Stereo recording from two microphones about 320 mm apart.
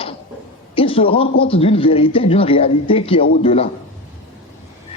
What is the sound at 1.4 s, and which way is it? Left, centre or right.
A man's voice, centre.